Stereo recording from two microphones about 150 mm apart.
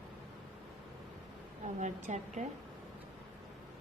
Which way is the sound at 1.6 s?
50° right (ahead or behind).